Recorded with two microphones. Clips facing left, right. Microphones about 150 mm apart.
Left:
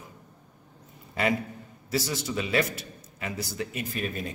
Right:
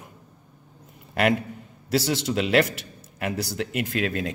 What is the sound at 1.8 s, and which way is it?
A man's voice, 70° right (ahead or behind).